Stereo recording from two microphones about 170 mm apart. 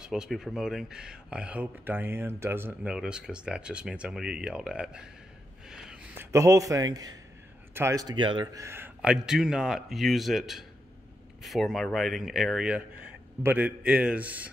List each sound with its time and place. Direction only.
0.0 s speech: 5° right (ahead or behind)
5.7 s a sound: 5° right (ahead or behind)
6.3 s speech: 20° right (ahead or behind)
8.6 s a man's voice: 15° right (ahead or behind)